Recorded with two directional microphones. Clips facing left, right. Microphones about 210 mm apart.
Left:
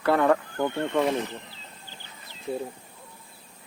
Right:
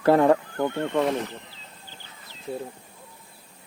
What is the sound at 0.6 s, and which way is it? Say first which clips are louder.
Speech: right 1 dB; 10° right (ahead or behind).